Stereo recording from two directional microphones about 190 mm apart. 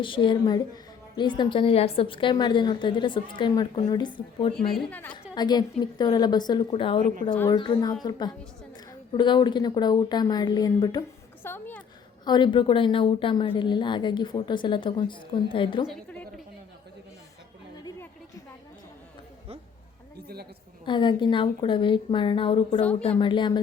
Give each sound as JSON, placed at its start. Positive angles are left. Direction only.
{"t": 0.0, "sound": "speech", "side_deg": 25}
{"t": 4.7, "sound": "a woman's voice", "side_deg": 5}
{"t": 5.3, "sound": "a woman's voice", "side_deg": 20}
{"t": 7.0, "sound": "speech", "side_deg": -45}
{"t": 7.3, "sound": "a woman's voice", "side_deg": 15}
{"t": 11.4, "sound": "a woman's voice", "side_deg": 10}
{"t": 12.2, "sound": "speech", "side_deg": 25}
{"t": 15.9, "sound": "a woman's voice", "side_deg": 5}
{"t": 17.8, "sound": "a sound", "side_deg": 20}
{"t": 20.2, "sound": "a sound", "side_deg": -55}
{"t": 20.8, "sound": "speech", "side_deg": 25}
{"t": 22.8, "sound": "a woman's voice", "side_deg": 5}
{"t": 23.0, "sound": "speech", "side_deg": 30}